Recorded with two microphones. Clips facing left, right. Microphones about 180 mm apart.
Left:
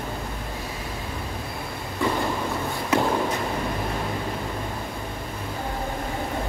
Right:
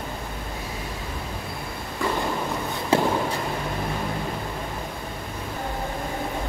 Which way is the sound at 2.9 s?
30° right (ahead or behind).